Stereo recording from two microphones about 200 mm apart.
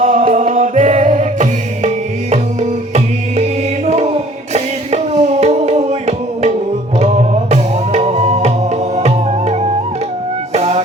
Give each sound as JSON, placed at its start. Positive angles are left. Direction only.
{"t": 0.0, "sound": "music", "side_deg": -40}